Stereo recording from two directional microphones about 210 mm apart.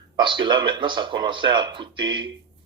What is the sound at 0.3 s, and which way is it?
Speech, 20° right (ahead or behind).